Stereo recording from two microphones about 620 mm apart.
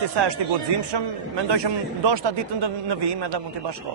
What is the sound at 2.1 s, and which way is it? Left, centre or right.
Speech, right.